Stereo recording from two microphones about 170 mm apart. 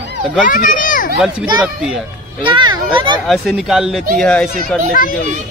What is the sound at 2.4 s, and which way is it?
Speech, 30° right (ahead or behind).